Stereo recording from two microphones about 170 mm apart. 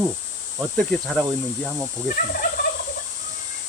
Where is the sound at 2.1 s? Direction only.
55° left (ahead or behind).